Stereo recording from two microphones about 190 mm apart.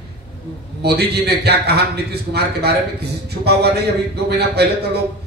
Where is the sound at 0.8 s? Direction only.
60° right (ahead or behind).